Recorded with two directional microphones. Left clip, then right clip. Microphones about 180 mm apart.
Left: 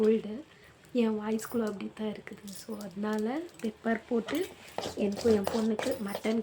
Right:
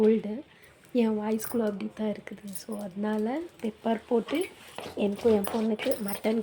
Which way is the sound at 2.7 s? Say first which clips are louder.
Right 4 dB; centre (ahead or behind).